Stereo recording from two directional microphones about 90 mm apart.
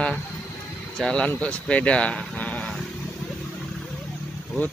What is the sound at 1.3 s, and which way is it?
Speech, 15° left (ahead or behind).